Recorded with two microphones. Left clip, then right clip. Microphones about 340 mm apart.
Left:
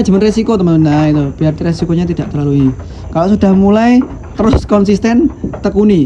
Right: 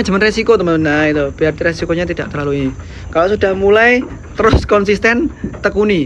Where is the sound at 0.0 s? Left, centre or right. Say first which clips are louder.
Left 1 dB; centre.